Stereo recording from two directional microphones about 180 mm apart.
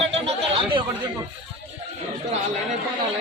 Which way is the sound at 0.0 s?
35° right (ahead or behind).